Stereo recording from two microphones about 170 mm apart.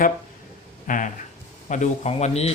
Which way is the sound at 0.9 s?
50° left (ahead or behind).